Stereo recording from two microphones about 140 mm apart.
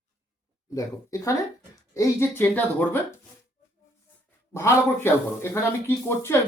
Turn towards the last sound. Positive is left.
turn(degrees=15)  # may be behind; listen again after turning